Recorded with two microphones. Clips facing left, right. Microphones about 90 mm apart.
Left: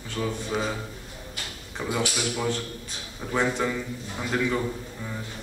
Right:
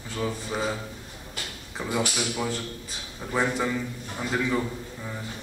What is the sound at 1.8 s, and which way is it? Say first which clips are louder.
Speech: even; centre (ahead or behind).